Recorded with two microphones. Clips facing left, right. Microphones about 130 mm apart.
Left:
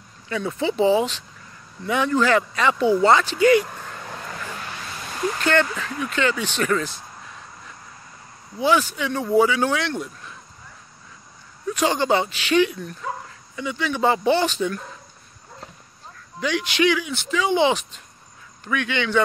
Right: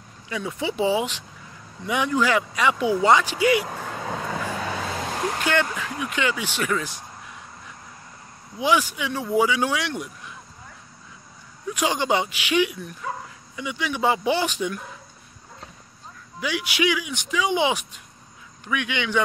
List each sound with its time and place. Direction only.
0.3 s speech: 10° right (ahead or behind)
3.6 s vehicle: 90° right
4.9 s a sound: 80° right
5.4 s speech: 10° right (ahead or behind)
8.5 s speech: 15° right (ahead or behind)
11.7 s speech: 10° right (ahead or behind)
16.3 s speech: 10° right (ahead or behind)